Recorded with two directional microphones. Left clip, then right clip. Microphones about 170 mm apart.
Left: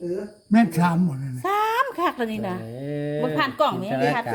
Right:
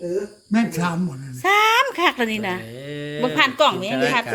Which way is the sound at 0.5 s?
70° left (ahead or behind).